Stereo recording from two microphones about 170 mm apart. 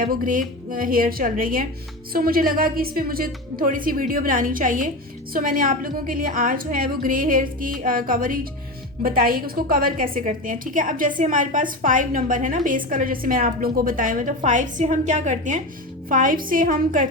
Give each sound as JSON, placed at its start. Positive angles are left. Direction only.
{"t": 0.0, "sound": "a woman's voice", "side_deg": -55}